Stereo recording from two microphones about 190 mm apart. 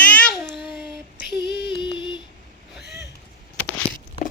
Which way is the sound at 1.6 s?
25° left (ahead or behind).